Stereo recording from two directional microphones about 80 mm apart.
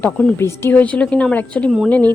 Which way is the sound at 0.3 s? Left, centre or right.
Left.